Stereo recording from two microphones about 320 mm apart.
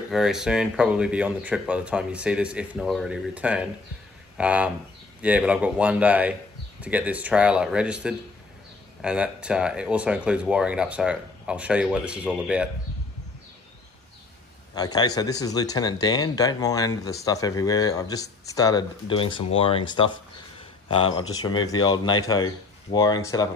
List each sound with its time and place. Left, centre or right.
0.1 s speech: centre
14.8 s speech: centre
21.3 s speech: centre